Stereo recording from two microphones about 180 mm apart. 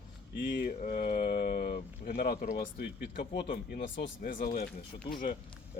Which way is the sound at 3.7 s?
50° left (ahead or behind).